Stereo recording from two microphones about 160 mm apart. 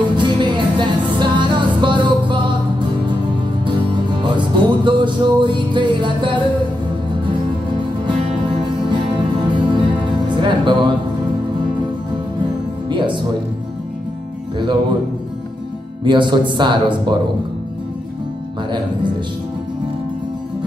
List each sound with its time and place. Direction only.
0.1 s music: 30° right (ahead or behind)
8.6 s music: 30° right (ahead or behind)
12.9 s music: 30° right (ahead or behind)
14.6 s music: 30° right (ahead or behind)
16.0 s speech: 30° right (ahead or behind)